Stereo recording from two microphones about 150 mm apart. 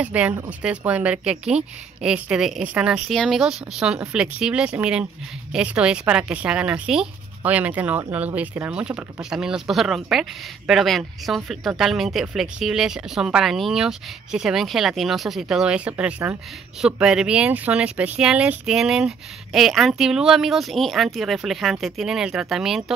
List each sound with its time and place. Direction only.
0.0 s speech: 10° right (ahead or behind)